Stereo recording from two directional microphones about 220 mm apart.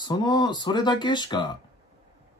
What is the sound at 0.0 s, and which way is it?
Speech, 20° left (ahead or behind).